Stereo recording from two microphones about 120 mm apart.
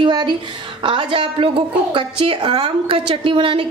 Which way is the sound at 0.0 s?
40° right (ahead or behind).